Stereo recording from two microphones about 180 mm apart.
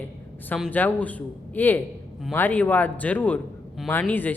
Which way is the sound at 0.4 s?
10° left (ahead or behind).